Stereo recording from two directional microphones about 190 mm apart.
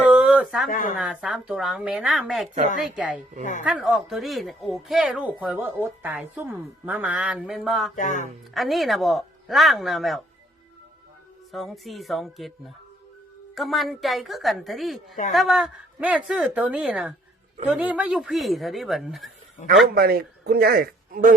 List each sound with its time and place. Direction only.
0.1 s a sound: 5° right (ahead or behind)
0.7 s speech: 45° left (ahead or behind)
0.9 s speech: 5° right (ahead or behind)
7.9 s speech: 40° left (ahead or behind)
8.5 s speech: centre (ahead or behind)
11.5 s speech: centre (ahead or behind)
19.9 s a man's voice: 55° right (ahead or behind)